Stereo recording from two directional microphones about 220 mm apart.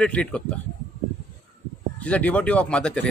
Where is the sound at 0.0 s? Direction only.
5° left (ahead or behind).